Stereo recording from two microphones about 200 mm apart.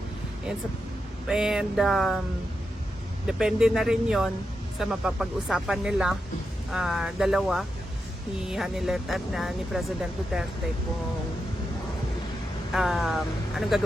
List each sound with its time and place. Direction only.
1.3 s speech: 5° right (ahead or behind)
3.2 s speech: centre (ahead or behind)
12.7 s speech: centre (ahead or behind)